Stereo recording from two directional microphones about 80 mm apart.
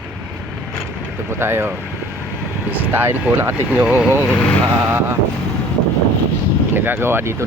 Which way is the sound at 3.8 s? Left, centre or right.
Centre.